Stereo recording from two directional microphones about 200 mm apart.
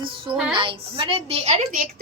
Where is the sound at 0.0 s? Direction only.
25° right (ahead or behind).